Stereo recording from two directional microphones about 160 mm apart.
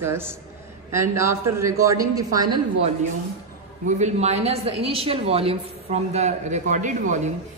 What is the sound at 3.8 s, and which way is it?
A woman's voice, 45° right (ahead or behind).